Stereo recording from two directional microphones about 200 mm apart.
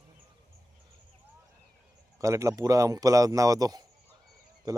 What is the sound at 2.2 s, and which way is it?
Speech, 15° right (ahead or behind).